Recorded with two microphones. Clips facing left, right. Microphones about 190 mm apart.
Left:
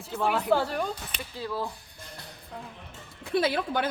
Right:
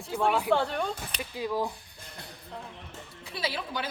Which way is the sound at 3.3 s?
55° left (ahead or behind).